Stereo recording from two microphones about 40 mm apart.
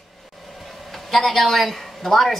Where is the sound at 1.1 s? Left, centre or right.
Centre.